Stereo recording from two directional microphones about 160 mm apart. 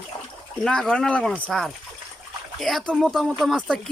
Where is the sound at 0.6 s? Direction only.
5° left (ahead or behind).